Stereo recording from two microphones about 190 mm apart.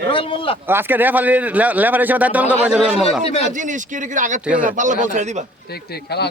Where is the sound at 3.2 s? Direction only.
30° left (ahead or behind).